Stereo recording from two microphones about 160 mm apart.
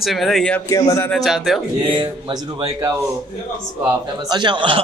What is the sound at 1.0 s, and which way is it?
Speech, centre (ahead or behind).